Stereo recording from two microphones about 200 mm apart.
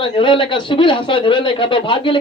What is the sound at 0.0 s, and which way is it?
Speech, 25° left (ahead or behind).